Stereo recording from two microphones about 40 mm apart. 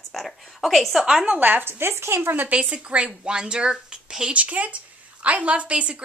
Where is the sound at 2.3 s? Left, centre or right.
Right.